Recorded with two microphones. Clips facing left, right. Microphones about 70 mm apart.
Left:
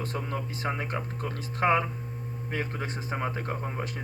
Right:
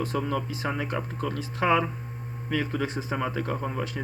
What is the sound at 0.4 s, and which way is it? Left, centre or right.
Speech, left.